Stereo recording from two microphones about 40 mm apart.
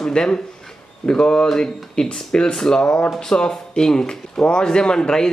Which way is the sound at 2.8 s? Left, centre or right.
Left.